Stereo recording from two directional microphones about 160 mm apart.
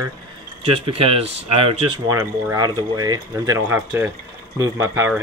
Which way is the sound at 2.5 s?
25° right (ahead or behind).